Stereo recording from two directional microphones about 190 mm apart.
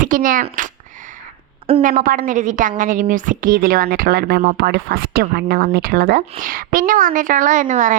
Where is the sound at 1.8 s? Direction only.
50° right (ahead or behind).